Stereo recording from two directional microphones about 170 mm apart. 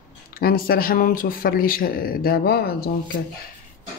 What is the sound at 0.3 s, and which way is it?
A man's voice, 60° left (ahead or behind).